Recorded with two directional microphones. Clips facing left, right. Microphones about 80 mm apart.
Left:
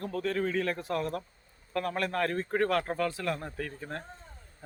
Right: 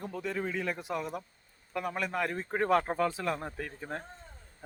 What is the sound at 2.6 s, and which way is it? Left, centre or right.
Speech, centre.